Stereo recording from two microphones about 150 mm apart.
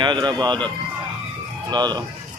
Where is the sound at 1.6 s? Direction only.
30° right (ahead or behind).